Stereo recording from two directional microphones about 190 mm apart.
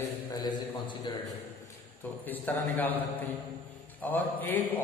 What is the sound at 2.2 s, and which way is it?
Speech, 10° left (ahead or behind).